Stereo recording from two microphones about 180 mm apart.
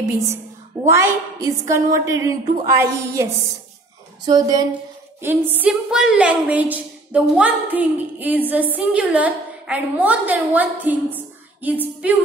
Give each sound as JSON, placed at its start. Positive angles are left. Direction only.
{"t": 0.8, "sound": "a woman's voice", "side_deg": -15}
{"t": 4.3, "sound": "a woman's voice", "side_deg": -20}